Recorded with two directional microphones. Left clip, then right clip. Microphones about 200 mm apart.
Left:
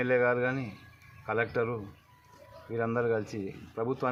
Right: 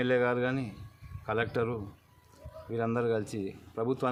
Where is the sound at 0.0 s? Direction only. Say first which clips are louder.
Left 1 dB; 25° right (ahead or behind).